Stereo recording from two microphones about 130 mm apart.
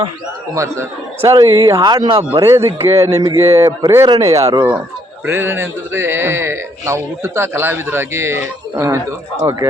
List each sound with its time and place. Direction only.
0.5 s a man's voice: 20° right (ahead or behind); by 2.4 s 40° right (ahead or behind)
2.4 s a man's voice: 20° right (ahead or behind)